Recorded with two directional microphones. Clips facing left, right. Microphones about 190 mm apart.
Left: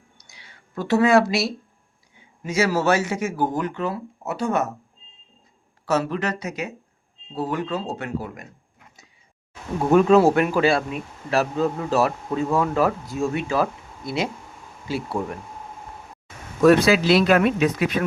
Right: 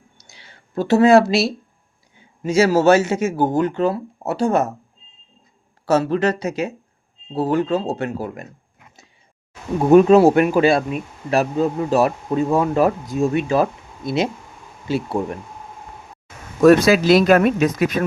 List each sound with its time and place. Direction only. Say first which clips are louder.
0.3 s a man's voice: right 3 dB; 30° right (ahead or behind)
5.8 s a man's voice: right 6 dB; 30° right (ahead or behind)
9.9 s a man's voice: right 5 dB; 20° right (ahead or behind)
16.6 s speech: right 3 dB; 45° right (ahead or behind)